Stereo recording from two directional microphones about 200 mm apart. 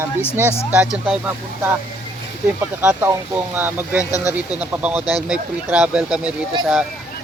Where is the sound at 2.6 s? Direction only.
10° right (ahead or behind).